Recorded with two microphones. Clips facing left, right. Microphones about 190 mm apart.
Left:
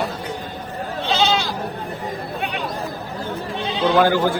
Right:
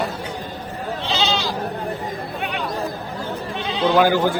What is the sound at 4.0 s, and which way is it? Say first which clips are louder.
Speech: even; 15° right (ahead or behind).